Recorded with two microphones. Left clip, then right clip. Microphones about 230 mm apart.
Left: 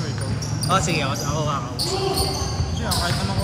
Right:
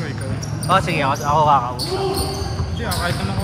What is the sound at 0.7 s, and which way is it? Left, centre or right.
Speech, right.